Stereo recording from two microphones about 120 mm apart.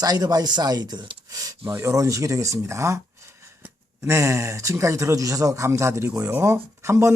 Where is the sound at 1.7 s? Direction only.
25° right (ahead or behind).